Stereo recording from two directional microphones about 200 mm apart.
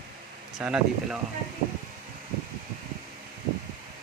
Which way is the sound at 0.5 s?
5° right (ahead or behind).